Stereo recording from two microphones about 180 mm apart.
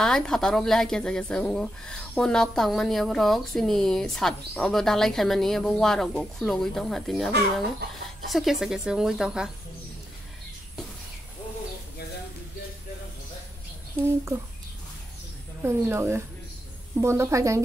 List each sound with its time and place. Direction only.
0.0 s speech: 5° left (ahead or behind)
15.6 s a woman's voice: 15° right (ahead or behind)